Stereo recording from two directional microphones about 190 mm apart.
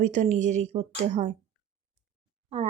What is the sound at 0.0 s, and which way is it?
Speech, 40° right (ahead or behind).